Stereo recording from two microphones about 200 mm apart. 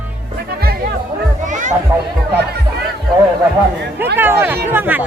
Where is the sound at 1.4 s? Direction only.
40° right (ahead or behind).